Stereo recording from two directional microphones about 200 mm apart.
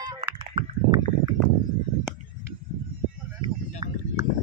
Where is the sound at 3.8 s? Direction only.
20° right (ahead or behind).